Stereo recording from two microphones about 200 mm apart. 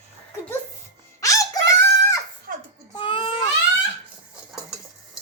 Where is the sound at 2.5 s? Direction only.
45° right (ahead or behind).